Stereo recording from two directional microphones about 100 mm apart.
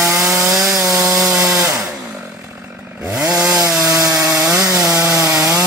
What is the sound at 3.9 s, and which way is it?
Wood, 35° right (ahead or behind).